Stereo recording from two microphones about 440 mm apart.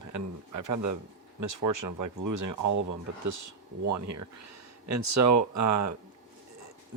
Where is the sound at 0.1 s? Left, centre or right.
Right.